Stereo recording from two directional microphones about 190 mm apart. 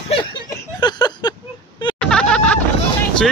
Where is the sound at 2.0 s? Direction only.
5° left (ahead or behind).